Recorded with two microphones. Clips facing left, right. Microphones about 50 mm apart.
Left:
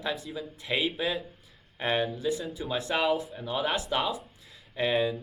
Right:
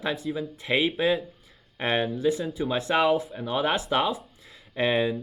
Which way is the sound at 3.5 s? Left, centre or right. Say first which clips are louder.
Right 4 dB; right.